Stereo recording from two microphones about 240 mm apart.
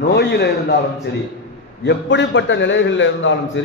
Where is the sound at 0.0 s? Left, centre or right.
Left.